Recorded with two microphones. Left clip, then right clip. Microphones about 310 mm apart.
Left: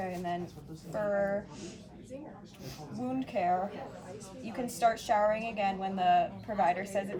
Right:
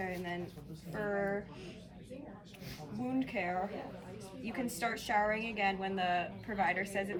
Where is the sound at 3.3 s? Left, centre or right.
Centre.